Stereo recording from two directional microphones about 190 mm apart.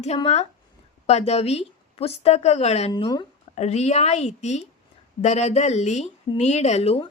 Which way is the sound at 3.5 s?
35° left (ahead or behind).